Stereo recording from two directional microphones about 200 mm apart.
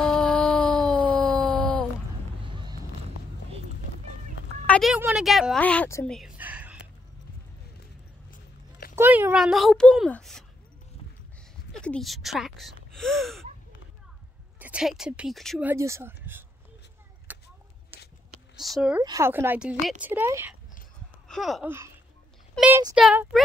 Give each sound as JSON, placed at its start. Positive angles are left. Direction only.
{"t": 0.0, "sound": "a sound", "side_deg": 5}
{"t": 4.6, "sound": "speech", "side_deg": 0}
{"t": 6.0, "sound": "a sound", "side_deg": 0}
{"t": 8.3, "sound": "a sound", "side_deg": 45}
{"t": 8.9, "sound": "speech", "side_deg": -10}
{"t": 11.7, "sound": "speech", "side_deg": 5}
{"t": 14.6, "sound": "speech", "side_deg": -5}
{"t": 15.7, "sound": "speech", "side_deg": -15}
{"t": 17.3, "sound": "a sound", "side_deg": -10}
{"t": 18.6, "sound": "speech", "side_deg": 0}
{"t": 19.0, "sound": "speech", "side_deg": -15}
{"t": 21.3, "sound": "speech", "side_deg": 0}
{"t": 21.6, "sound": "speech", "side_deg": -15}